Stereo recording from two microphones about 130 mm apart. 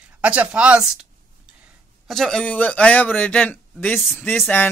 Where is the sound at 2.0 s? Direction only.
Centre (ahead or behind).